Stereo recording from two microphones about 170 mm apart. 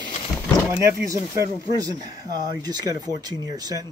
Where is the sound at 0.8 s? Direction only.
20° right (ahead or behind).